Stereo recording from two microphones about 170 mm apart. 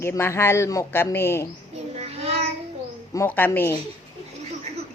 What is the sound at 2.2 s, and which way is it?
Child singing, 40° right (ahead or behind).